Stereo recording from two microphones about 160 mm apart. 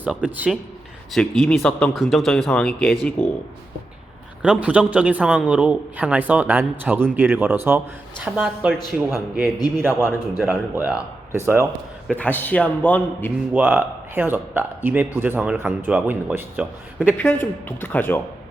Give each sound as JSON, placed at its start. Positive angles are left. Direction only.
{"t": 0.0, "sound": "speech", "side_deg": -10}
{"t": 1.1, "sound": "speech", "side_deg": 5}
{"t": 4.4, "sound": "speech", "side_deg": -5}
{"t": 12.1, "sound": "a man's voice", "side_deg": 10}
{"t": 13.5, "sound": "speech", "side_deg": -10}
{"t": 17.2, "sound": "a man's voice", "side_deg": 10}